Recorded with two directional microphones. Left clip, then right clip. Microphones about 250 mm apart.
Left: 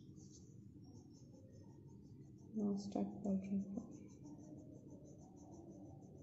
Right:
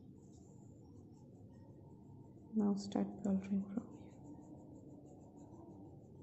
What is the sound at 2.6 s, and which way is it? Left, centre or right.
Speech, right.